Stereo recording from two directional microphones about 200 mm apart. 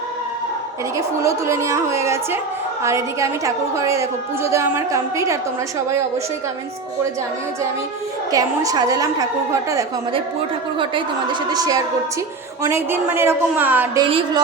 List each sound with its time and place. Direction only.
0.9 s a woman's voice: 15° right (ahead or behind)
8.3 s a woman's voice: 20° right (ahead or behind)
10.8 s a woman's voice: 25° right (ahead or behind)
14.0 s a woman's voice: 25° right (ahead or behind)